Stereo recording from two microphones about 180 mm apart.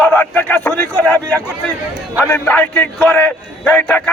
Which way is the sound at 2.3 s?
10° left (ahead or behind).